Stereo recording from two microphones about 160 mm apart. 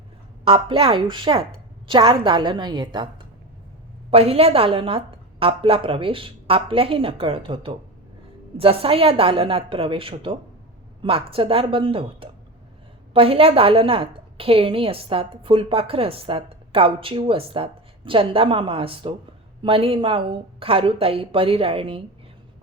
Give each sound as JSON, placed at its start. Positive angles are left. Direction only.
{"t": 0.4, "sound": "a woman's voice", "side_deg": -35}
{"t": 4.1, "sound": "a woman's voice", "side_deg": -40}